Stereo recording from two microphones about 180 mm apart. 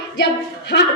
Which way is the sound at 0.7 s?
65° left (ahead or behind).